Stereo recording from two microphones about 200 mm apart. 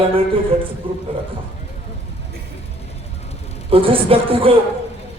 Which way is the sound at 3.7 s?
25° right (ahead or behind).